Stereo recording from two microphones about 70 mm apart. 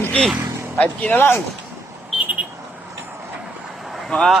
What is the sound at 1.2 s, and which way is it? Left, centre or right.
Speech, left.